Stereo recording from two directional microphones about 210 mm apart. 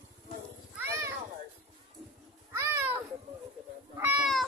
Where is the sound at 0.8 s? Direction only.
10° right (ahead or behind).